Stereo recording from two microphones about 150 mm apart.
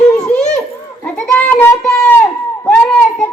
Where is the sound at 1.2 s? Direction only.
10° left (ahead or behind).